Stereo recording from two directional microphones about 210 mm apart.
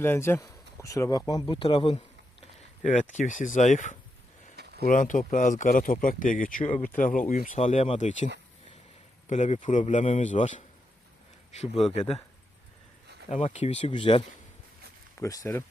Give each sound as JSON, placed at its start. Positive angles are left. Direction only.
{"t": 0.0, "sound": "speech", "side_deg": 10}
{"t": 2.8, "sound": "speech", "side_deg": 35}
{"t": 4.5, "sound": "a sound", "side_deg": -50}
{"t": 4.9, "sound": "speech", "side_deg": 40}
{"t": 9.3, "sound": "speech", "side_deg": 35}
{"t": 13.3, "sound": "speech", "side_deg": 30}